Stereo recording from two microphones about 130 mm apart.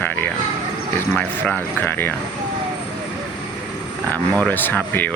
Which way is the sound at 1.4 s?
10° left (ahead or behind).